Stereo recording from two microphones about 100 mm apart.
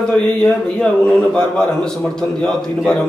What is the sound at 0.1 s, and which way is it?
A man's voice, 10° left (ahead or behind).